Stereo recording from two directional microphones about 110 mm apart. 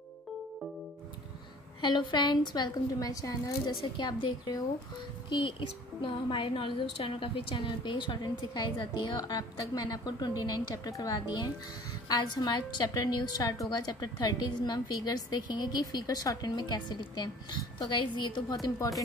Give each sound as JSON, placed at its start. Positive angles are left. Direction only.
{"t": 1.8, "sound": "a woman's voice", "side_deg": 45}
{"t": 3.9, "sound": "a woman's voice", "side_deg": 45}